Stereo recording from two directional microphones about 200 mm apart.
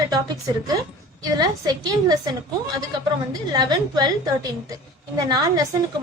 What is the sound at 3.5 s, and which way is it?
A woman's voice, 20° right (ahead or behind).